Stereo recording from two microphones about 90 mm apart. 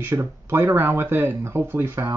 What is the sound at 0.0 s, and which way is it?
Speech, 25° right (ahead or behind).